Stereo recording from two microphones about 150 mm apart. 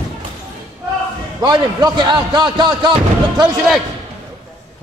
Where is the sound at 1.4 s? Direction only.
25° right (ahead or behind).